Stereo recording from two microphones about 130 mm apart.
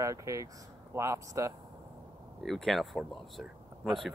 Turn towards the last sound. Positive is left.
turn(degrees=0)  # may be behind; listen again after turning